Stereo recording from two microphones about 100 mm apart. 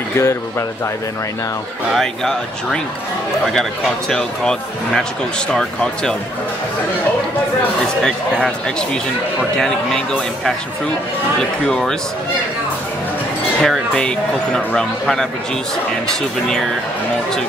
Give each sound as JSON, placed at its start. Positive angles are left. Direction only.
{"t": 0.2, "sound": "speech", "side_deg": 25}
{"t": 2.0, "sound": "speech", "side_deg": 5}
{"t": 4.1, "sound": "speech", "side_deg": 5}
{"t": 8.0, "sound": "speech", "side_deg": 10}
{"t": 11.6, "sound": "speech", "side_deg": 5}
{"t": 13.6, "sound": "speech", "side_deg": 5}